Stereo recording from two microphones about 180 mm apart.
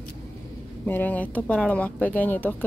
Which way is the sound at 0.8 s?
10° left (ahead or behind).